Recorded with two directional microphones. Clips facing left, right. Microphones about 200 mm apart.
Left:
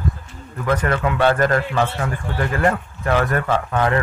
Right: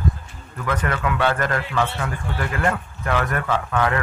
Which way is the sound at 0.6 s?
35° left (ahead or behind).